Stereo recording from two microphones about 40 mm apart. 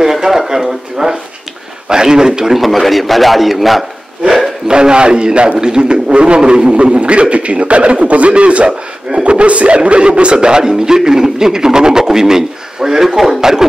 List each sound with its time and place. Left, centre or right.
0.0 s a sound: centre
1.9 s speech: centre
2.5 s a man's voice: centre
4.6 s a man's voice: right